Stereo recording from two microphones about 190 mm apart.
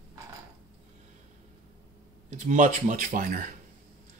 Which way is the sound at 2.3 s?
40° right (ahead or behind).